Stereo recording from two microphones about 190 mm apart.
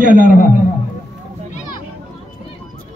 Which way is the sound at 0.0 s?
45° right (ahead or behind).